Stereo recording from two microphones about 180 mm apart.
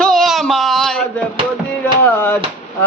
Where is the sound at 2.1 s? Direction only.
10° left (ahead or behind).